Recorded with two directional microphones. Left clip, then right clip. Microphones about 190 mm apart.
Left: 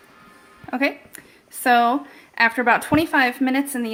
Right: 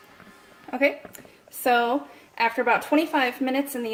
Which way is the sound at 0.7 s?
40° left (ahead or behind).